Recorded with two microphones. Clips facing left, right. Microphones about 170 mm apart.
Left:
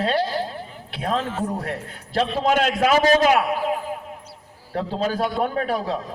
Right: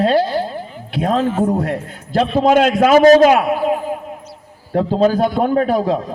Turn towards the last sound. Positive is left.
turn(degrees=-35)  # may be behind; listen again after turning